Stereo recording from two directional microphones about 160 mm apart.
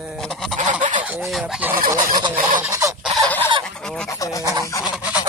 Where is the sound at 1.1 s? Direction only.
5° right (ahead or behind).